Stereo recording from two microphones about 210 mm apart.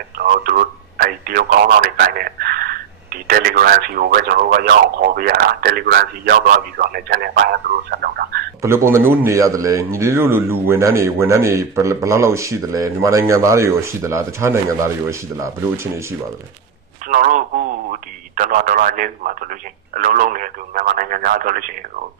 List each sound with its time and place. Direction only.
0.2 s speech: 45° right (ahead or behind)
8.6 s a man's voice: 10° right (ahead or behind)
17.1 s speech: 40° right (ahead or behind)